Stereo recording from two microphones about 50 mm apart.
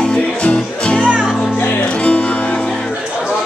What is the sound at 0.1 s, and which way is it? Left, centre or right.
Music, left.